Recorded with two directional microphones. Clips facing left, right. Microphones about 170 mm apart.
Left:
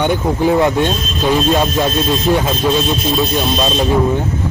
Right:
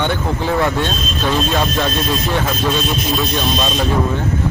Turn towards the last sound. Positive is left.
turn(degrees=20)  # may be behind; listen again after turning